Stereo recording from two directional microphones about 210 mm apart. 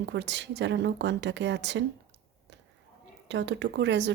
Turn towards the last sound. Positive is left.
turn(degrees=-55)  # may be behind; listen again after turning